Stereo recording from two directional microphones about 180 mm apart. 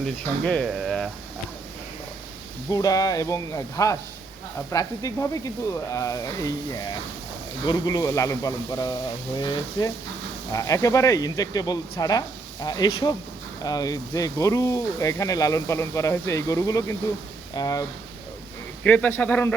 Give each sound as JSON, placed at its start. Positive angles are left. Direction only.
{"t": 0.0, "sound": "speech", "side_deg": 5}
{"t": 2.6, "sound": "speech", "side_deg": 20}
{"t": 18.9, "sound": "speech", "side_deg": 10}